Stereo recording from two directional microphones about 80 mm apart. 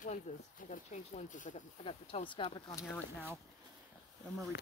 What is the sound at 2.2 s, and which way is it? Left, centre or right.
Speech, left.